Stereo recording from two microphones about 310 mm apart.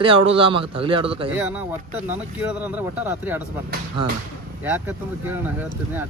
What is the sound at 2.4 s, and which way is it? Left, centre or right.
Speech, centre.